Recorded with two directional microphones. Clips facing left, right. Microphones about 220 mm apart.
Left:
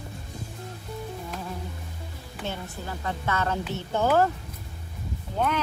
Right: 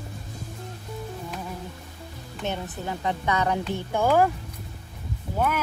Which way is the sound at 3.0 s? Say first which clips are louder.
Right 3 dB; 15° right (ahead or behind).